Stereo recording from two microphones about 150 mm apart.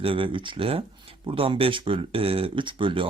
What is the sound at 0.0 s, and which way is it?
Speech, 35° right (ahead or behind).